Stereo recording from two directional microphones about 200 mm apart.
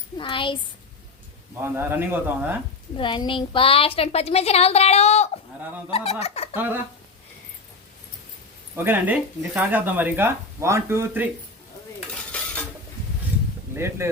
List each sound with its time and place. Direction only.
0.2 s a woman's voice: 25° left (ahead or behind)
1.6 s speech: 10° right (ahead or behind)
3.0 s a woman's voice: 25° left (ahead or behind)
8.7 s speech: 10° right (ahead or behind)
12.3 s cutlery: 5° left (ahead or behind)
13.7 s speech: 10° right (ahead or behind)